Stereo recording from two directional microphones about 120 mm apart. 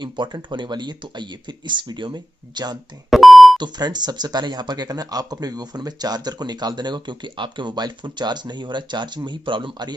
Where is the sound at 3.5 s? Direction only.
35° right (ahead or behind).